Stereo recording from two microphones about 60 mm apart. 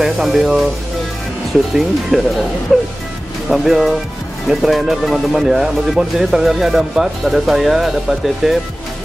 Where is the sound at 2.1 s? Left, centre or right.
Centre.